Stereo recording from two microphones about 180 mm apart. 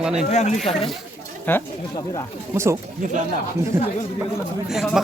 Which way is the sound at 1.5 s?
10° left (ahead or behind).